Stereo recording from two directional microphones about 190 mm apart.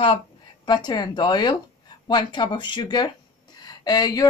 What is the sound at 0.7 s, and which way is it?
Speech, 20° left (ahead or behind).